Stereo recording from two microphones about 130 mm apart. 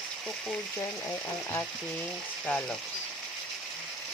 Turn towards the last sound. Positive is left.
turn(degrees=10)  # may be behind; listen again after turning